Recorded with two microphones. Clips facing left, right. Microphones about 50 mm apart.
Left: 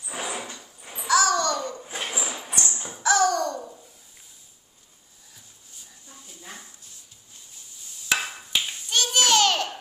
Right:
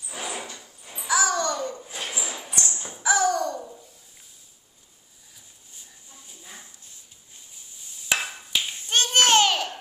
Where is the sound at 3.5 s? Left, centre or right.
Centre.